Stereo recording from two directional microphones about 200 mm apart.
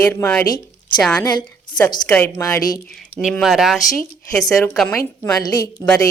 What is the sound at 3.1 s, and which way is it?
Speech, centre (ahead or behind).